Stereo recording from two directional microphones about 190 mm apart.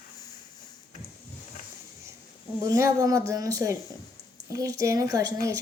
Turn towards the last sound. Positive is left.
turn(degrees=-20)  # may be behind; listen again after turning